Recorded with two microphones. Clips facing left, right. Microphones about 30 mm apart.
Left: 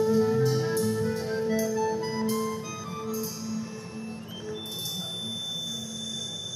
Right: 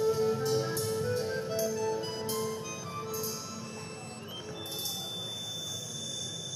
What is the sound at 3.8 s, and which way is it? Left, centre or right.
Music, right.